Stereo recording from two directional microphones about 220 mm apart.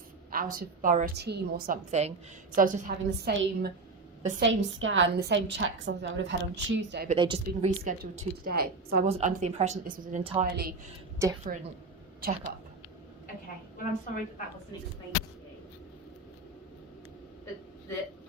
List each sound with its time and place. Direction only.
0.3 s a woman's voice: 40° right (ahead or behind)
4.4 s a woman's voice: 60° right (ahead or behind)
7.1 s a woman's voice: 25° right (ahead or behind)
7.9 s a woman's voice: 40° right (ahead or behind)
9.0 s a woman's voice: 30° right (ahead or behind)
11.2 s a woman's voice: 15° right (ahead or behind)
13.7 s a woman's voice: 40° left (ahead or behind)